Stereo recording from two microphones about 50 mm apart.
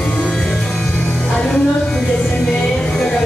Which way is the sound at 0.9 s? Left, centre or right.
Left.